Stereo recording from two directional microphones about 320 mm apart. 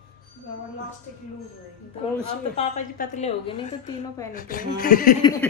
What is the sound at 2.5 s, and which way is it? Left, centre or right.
A woman's voice, left.